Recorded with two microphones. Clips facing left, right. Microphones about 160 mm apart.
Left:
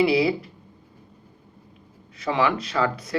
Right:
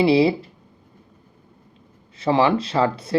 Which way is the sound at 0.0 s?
30° right (ahead or behind).